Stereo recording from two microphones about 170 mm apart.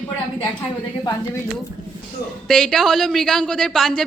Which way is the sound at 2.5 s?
5° left (ahead or behind).